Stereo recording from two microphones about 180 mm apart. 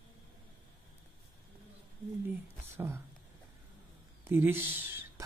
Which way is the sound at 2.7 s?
15° right (ahead or behind).